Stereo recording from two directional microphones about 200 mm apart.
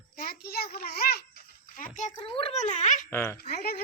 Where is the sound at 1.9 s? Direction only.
35° left (ahead or behind).